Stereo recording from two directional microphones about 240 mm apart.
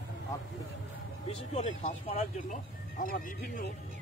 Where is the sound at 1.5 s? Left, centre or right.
Left.